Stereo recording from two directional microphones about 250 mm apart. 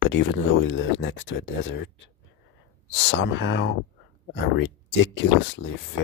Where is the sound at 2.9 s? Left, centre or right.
Left.